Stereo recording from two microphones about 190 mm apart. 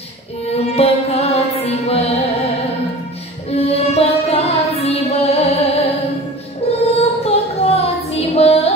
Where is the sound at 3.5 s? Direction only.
30° left (ahead or behind).